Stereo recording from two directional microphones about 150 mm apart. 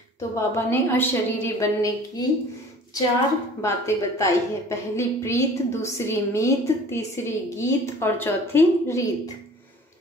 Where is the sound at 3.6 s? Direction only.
20° left (ahead or behind).